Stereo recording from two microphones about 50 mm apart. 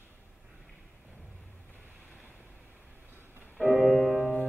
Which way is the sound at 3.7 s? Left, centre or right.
Centre.